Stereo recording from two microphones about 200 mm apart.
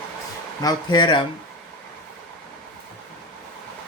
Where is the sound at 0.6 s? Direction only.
20° left (ahead or behind).